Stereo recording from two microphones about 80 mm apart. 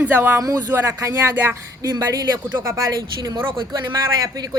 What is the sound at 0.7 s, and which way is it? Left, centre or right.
Female singing, right.